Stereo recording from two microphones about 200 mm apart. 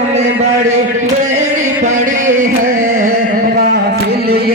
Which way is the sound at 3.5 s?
50° right (ahead or behind).